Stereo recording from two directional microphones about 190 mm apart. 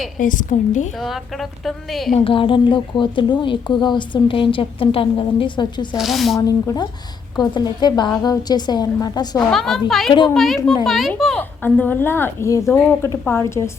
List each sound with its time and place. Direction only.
0.2 s a woman's voice: 45° left (ahead or behind)
0.9 s a woman's voice: centre (ahead or behind)
2.1 s a woman's voice: 30° left (ahead or behind)
6.0 s a woman's voice: centre (ahead or behind)
7.3 s a woman's voice: 20° left (ahead or behind)
9.5 s a woman's voice: centre (ahead or behind)